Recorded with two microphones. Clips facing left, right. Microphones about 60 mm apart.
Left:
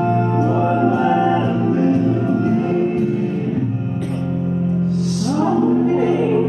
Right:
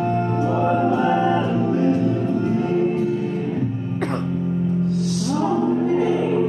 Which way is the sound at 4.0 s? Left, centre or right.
Right.